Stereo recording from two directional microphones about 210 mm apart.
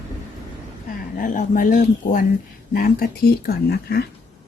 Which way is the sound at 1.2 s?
40° left (ahead or behind).